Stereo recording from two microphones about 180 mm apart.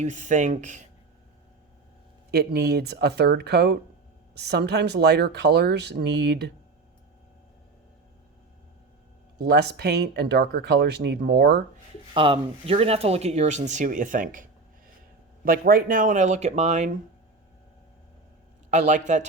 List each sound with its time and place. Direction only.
0.0 s speech: 45° right (ahead or behind)
2.3 s speech: 60° right (ahead or behind)
9.4 s speech: 65° right (ahead or behind)
12.1 s speech: 30° right (ahead or behind); by 14.4 s 45° right (ahead or behind)
15.4 s speech: 55° right (ahead or behind)
18.7 s speech: 40° right (ahead or behind)